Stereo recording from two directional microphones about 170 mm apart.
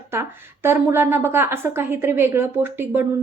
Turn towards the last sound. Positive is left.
turn(degrees=-15)  # may be behind; listen again after turning